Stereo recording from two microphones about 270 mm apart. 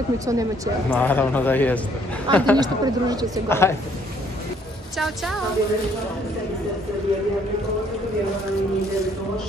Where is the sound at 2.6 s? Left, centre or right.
Centre.